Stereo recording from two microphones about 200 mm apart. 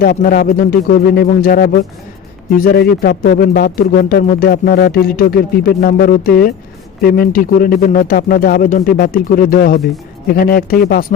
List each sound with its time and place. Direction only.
0.0 s speech: 45° left (ahead or behind)